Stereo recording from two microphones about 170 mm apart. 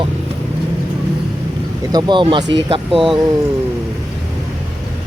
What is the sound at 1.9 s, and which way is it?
Speech, 25° right (ahead or behind).